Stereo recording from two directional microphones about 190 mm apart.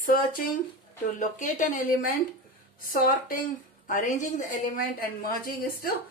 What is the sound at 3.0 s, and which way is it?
A woman's voice, 50° left (ahead or behind).